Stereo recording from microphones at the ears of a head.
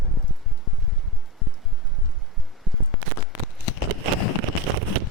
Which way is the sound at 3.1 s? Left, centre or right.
Left.